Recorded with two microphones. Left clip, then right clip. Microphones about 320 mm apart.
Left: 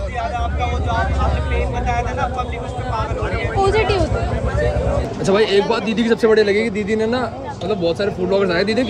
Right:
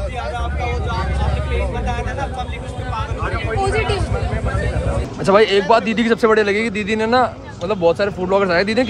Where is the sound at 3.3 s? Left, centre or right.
Left.